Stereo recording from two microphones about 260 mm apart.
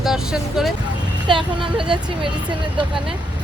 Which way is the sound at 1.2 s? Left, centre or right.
Centre.